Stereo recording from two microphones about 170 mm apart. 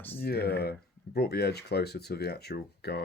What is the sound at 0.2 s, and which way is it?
Speech, 65° left (ahead or behind).